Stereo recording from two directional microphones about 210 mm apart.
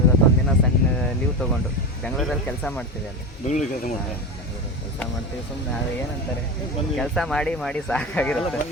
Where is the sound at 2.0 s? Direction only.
5° left (ahead or behind).